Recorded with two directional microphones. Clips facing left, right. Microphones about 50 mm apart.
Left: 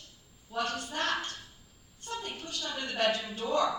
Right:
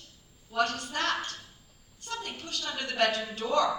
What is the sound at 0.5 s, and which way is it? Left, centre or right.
Speech, right.